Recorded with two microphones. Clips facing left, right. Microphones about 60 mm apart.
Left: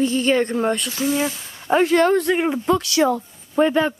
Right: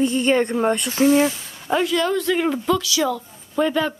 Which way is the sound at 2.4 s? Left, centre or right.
Left.